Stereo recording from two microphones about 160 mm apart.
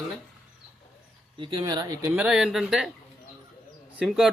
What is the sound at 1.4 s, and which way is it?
Speech, 30° right (ahead or behind).